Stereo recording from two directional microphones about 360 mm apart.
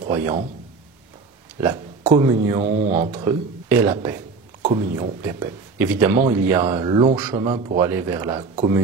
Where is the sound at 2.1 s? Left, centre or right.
Centre.